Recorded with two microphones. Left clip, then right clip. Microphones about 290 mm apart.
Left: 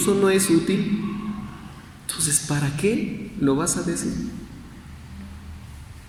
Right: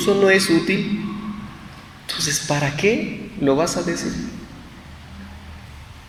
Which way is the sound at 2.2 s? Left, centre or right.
Right.